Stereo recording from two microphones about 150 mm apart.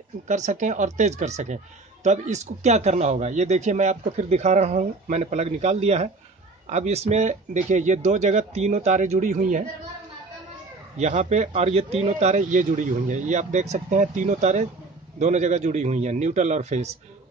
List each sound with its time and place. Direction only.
0.3 s speech: 55° right (ahead or behind)
11.0 s speech: 50° right (ahead or behind)